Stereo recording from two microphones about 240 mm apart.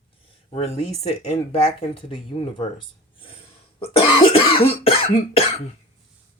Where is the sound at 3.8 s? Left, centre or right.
Left.